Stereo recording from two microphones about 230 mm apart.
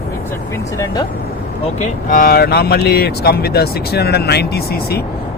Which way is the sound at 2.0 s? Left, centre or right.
Left.